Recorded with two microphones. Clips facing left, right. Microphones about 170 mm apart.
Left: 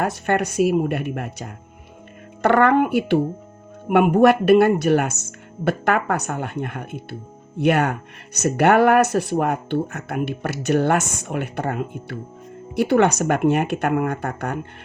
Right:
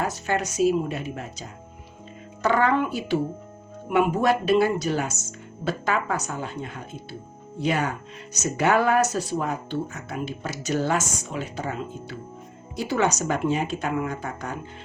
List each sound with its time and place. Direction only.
0.0 s speech: 60° left (ahead or behind)